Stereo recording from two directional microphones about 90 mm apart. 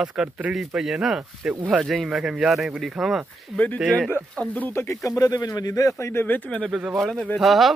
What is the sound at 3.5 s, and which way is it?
Speech, 15° left (ahead or behind).